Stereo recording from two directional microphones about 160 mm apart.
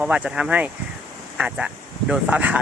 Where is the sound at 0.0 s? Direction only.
5° right (ahead or behind).